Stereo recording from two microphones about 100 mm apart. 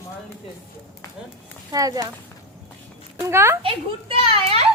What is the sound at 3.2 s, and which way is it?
Speech, 25° right (ahead or behind).